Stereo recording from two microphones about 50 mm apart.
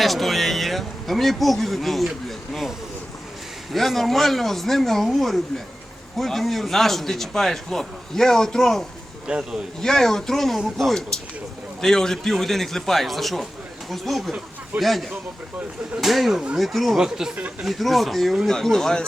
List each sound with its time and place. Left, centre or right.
0.0 s speech: centre
3.7 s a man's voice: centre
9.2 s a man's voice: centre
9.8 s a man's voice: centre
17.0 s speech: centre
17.6 s a man's voice: centre